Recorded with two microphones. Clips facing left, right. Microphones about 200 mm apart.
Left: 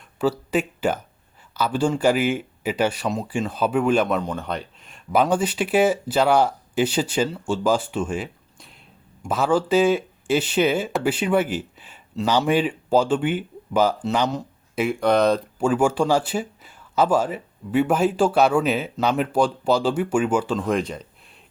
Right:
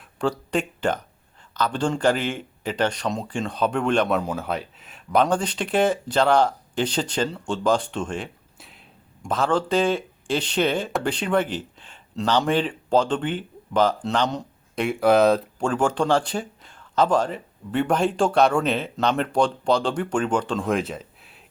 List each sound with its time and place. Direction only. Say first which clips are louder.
0.2 s speech: left 2 dB; 5° left (ahead or behind)
4.2 s speech: right 1 dB; 5° right (ahead or behind)